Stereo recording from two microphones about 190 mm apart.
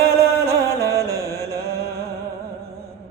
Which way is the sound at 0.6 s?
15° left (ahead or behind).